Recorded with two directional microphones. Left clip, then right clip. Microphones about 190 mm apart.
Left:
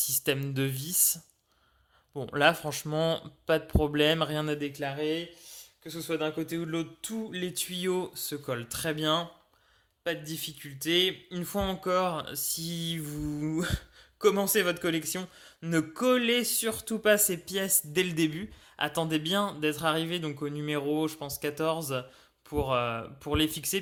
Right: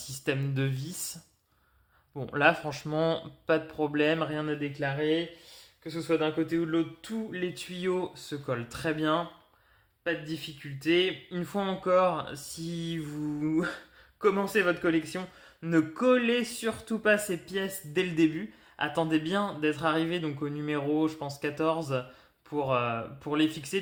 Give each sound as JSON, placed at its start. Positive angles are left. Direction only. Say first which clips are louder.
{"t": 0.0, "sound": "speech", "louder": "left 2 dB", "side_deg": 30}